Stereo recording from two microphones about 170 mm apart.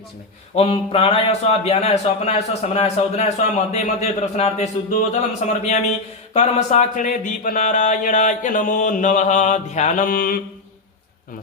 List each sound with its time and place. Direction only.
0.5 s a man's voice: 35° left (ahead or behind)
6.3 s a sound: 40° left (ahead or behind)
10.1 s mantra: 60° left (ahead or behind)